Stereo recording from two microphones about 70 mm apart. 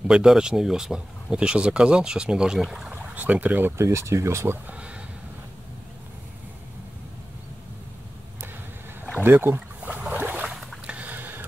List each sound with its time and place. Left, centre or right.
0.1 s speech: centre
2.9 s speech: right
3.8 s speech: right
4.6 s a sound: centre
9.2 s speech: right
9.8 s boat: centre
10.4 s boat: centre
10.9 s a sound: right